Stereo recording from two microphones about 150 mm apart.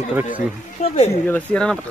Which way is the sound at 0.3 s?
50° left (ahead or behind).